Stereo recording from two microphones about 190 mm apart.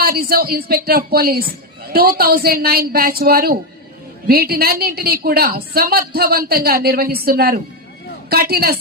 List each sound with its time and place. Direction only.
0.0 s a woman's voice: 55° right (ahead or behind)